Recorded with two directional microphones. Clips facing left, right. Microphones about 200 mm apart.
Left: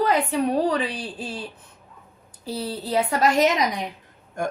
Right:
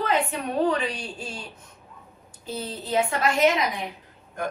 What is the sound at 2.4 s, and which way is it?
A woman's voice, 35° left (ahead or behind).